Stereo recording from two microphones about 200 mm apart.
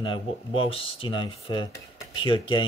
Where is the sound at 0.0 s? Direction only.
25° left (ahead or behind).